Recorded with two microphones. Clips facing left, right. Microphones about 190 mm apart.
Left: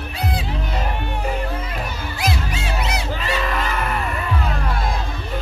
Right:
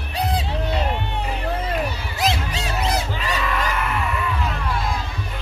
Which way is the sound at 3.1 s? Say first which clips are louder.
Left 1 dB; 45° left (ahead or behind).